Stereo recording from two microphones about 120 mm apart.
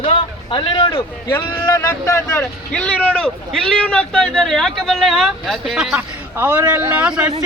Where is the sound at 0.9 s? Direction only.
25° left (ahead or behind).